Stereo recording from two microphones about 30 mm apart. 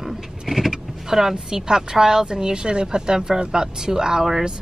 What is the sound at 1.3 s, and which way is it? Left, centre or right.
A woman's voice, right.